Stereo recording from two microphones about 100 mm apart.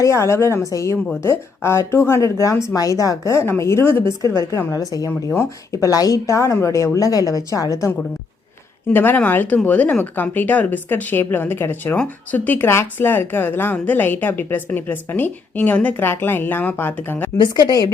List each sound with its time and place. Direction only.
0.0 s a woman's voice: 30° left (ahead or behind)
8.9 s speech: 20° left (ahead or behind)
17.3 s speech: 45° left (ahead or behind)